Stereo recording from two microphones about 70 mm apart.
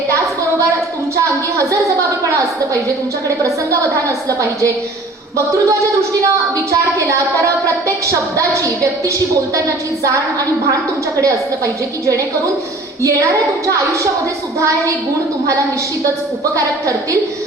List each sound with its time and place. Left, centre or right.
1.1 s a woman's voice: right
11.2 s a woman's voice: right
14.6 s a woman's voice: right
16.6 s a woman's voice: right